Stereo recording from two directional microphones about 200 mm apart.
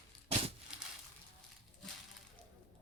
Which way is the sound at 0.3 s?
30° right (ahead or behind).